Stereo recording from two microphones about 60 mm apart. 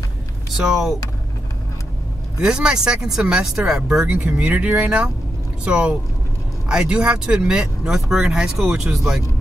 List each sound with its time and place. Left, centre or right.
0.7 s speech: centre
2.4 s speech: centre
5.7 s speech: centre